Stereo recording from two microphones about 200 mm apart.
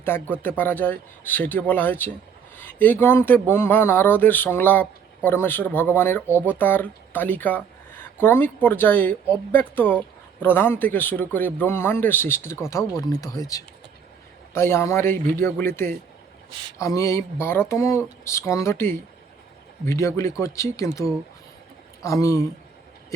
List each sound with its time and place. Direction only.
0.0 s speech: 10° left (ahead or behind)